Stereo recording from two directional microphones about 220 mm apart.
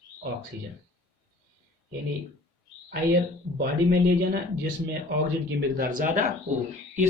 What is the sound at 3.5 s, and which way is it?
Speech, 45° right (ahead or behind).